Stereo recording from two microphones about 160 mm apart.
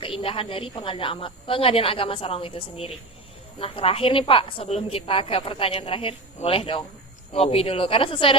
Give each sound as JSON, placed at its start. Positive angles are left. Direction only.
{"t": 0.0, "sound": "a woman's voice", "side_deg": 35}